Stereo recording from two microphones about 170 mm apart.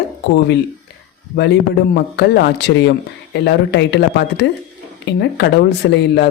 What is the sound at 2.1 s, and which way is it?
Speech, 80° left.